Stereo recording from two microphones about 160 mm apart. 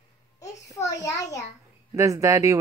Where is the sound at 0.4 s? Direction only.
20° left (ahead or behind).